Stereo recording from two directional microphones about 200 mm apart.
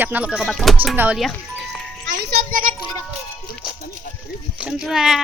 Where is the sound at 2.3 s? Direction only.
45° right (ahead or behind).